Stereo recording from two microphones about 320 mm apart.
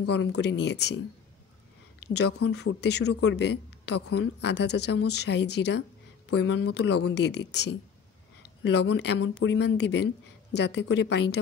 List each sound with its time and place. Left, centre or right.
0.1 s speech: left
2.1 s speech: left